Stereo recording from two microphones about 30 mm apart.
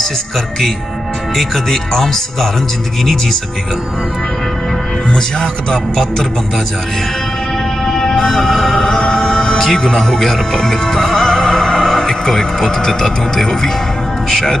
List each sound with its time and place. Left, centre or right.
1.3 s speech: centre
5.1 s speech: left
7.8 s music: centre
8.4 s speech: centre
9.1 s music: left
12.1 s speech: centre